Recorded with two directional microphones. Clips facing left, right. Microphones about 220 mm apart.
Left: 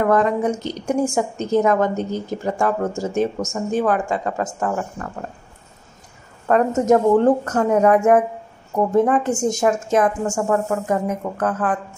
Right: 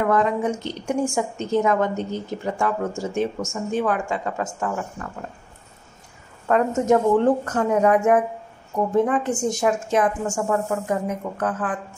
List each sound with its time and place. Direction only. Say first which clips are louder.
0.0 s a woman's voice: left 3 dB; 45° left (ahead or behind)
6.4 s a woman's voice: left 3 dB; 40° left (ahead or behind)